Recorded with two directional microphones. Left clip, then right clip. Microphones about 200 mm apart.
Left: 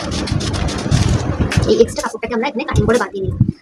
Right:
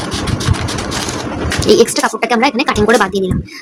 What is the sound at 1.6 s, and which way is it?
A woman's voice, 60° right (ahead or behind).